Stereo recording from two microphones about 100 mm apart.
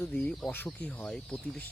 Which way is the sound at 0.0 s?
10° left (ahead or behind).